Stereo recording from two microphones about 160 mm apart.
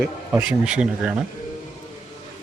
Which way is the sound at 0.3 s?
5° right (ahead or behind).